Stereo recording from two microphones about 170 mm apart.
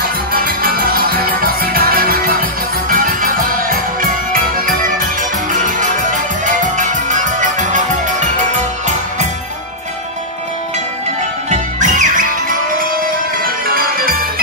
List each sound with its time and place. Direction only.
0.3 s music: 60° right (ahead or behind)
11.5 s music: 50° right (ahead or behind)